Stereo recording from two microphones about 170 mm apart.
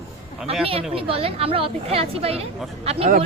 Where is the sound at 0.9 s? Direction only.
35° right (ahead or behind).